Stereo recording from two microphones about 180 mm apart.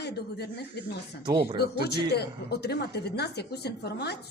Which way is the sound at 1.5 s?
60° left (ahead or behind).